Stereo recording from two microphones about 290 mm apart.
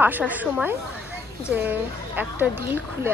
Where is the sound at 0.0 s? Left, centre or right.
Centre.